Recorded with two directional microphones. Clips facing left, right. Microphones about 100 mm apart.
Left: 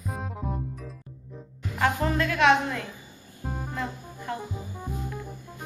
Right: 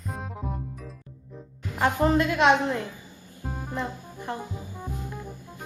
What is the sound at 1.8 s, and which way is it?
A woman's voice, 20° right (ahead or behind).